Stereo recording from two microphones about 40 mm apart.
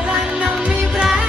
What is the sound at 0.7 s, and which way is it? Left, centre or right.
Music, centre.